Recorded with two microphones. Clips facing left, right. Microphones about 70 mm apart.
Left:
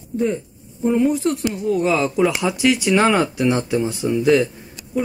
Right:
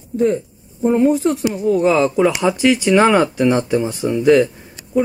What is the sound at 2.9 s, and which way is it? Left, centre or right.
Speech, centre.